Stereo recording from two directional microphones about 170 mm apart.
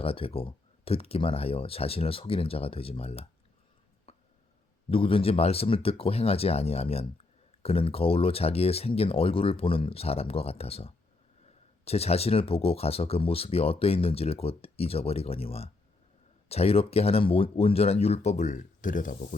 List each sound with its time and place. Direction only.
0.0 s speech: 35° left (ahead or behind)
4.1 s a sound: 35° left (ahead or behind)
4.9 s speech: 30° left (ahead or behind); by 19.1 s 50° left (ahead or behind)